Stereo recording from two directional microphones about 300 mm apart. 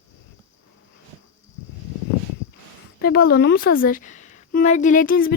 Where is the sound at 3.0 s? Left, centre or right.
Left.